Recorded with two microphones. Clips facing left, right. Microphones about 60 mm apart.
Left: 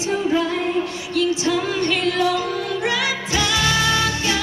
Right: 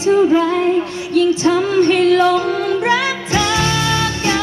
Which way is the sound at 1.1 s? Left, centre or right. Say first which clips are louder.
Right 7 dB; right.